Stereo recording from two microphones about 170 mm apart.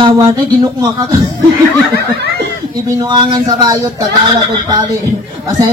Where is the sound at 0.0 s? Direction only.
30° right (ahead or behind).